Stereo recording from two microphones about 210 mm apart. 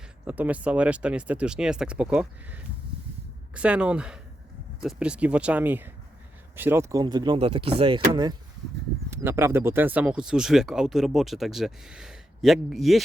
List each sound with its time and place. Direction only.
0.3 s speech: 10° right (ahead or behind)